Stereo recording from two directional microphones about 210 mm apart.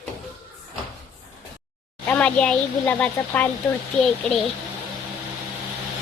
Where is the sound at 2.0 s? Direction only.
5° left (ahead or behind).